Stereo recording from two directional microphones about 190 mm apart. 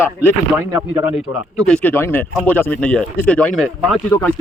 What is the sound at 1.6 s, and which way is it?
Speech, 5° left (ahead or behind).